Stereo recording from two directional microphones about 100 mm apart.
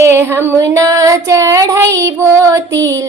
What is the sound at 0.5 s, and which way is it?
Female singing, 35° right (ahead or behind).